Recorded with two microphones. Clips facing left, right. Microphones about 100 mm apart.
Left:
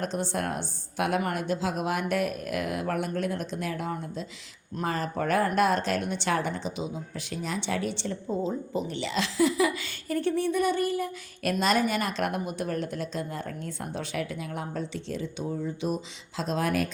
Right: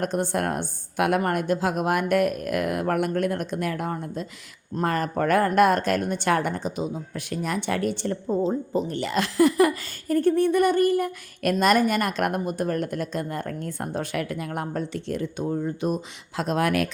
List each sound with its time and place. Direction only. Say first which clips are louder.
0.0 s speech: right 5 dB; 55° right (ahead or behind)
16.4 s speech: right 4 dB; 60° right (ahead or behind); by 16.9 s 80° right